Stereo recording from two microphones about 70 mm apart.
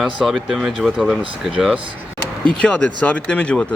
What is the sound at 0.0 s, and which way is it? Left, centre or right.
Speech, centre.